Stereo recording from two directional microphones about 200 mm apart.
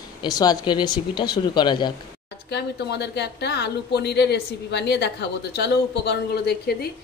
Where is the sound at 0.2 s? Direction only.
20° left (ahead or behind).